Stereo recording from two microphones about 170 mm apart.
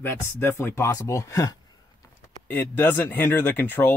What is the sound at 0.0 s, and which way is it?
Speech, 15° left (ahead or behind).